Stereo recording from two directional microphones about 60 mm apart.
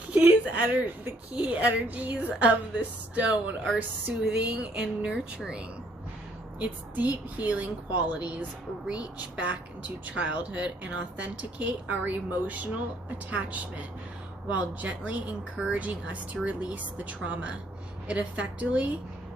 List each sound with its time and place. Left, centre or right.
0.1 s a sound: right
1.4 s speech: right
6.6 s speech: right